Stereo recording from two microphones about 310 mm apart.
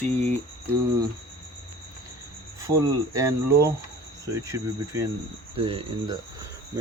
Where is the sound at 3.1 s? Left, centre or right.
Centre.